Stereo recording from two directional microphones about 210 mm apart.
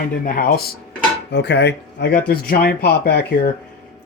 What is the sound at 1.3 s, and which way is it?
Speech, 55° left (ahead or behind).